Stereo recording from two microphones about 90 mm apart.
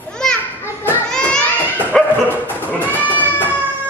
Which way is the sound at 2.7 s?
20° left (ahead or behind).